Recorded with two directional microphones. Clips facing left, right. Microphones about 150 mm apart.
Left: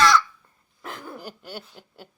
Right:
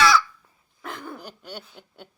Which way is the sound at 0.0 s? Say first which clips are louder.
Even; 5° right (ahead or behind).